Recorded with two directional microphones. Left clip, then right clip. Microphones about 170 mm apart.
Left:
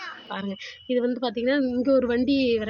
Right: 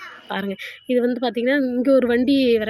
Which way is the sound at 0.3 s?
20° right (ahead or behind).